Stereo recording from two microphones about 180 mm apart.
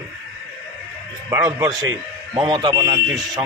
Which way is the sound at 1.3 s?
20° right (ahead or behind).